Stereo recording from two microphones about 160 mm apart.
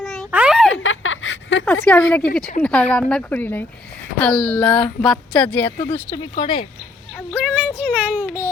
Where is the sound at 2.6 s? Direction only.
5° left (ahead or behind).